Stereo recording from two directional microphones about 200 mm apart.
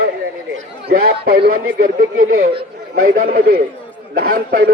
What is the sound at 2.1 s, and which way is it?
Speech, 90° right.